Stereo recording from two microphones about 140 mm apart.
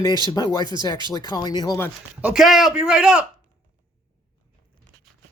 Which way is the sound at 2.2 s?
5° right (ahead or behind).